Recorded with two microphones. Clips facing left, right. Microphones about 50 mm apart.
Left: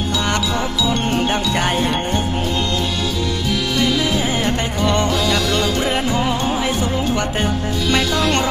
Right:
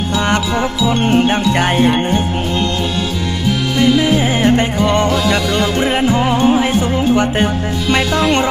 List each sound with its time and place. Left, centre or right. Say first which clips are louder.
0.3 s music: right 4 dB; right
3.8 s music: right 7 dB; right